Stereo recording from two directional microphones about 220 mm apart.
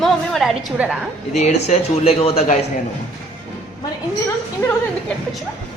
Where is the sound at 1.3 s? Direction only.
30° left (ahead or behind).